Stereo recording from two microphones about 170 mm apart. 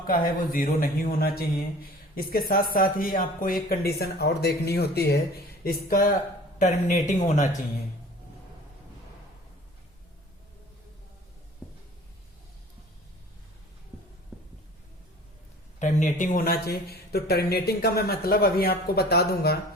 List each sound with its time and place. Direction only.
0.1 s speech: 55° left (ahead or behind)
3.9 s speech: 70° left (ahead or behind)
5.6 s speech: 55° left (ahead or behind)
14.3 s a sound: centre (ahead or behind)
15.8 s speech: 45° left (ahead or behind); by 19.5 s 65° left (ahead or behind)